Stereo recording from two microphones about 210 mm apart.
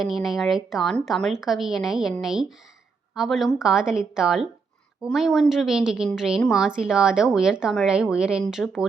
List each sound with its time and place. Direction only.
0.0 s a woman's voice: centre (ahead or behind)